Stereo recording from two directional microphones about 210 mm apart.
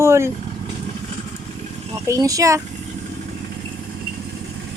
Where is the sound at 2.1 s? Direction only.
15° right (ahead or behind).